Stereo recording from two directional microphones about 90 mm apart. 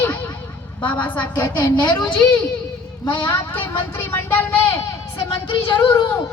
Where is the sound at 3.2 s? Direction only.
20° left (ahead or behind).